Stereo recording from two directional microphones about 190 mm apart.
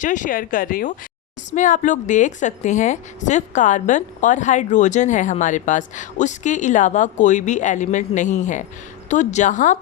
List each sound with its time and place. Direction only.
0.0 s a woman's voice: 40° left (ahead or behind)